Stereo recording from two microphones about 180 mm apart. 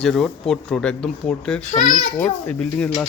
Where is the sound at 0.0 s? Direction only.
Centre (ahead or behind).